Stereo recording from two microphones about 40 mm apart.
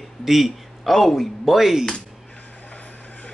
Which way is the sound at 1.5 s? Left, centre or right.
Centre.